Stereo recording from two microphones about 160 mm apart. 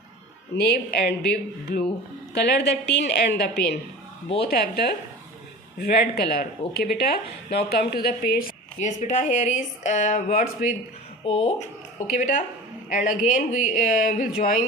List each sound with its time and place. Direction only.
0.5 s a woman's voice: 90° left; by 14.6 s 55° left (ahead or behind)